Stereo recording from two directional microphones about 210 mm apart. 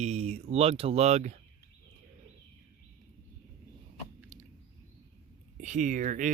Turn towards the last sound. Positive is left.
turn(degrees=-35)  # may be behind; listen again after turning